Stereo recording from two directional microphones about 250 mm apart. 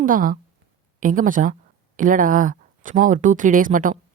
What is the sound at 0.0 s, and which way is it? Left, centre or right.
A woman's voice, right.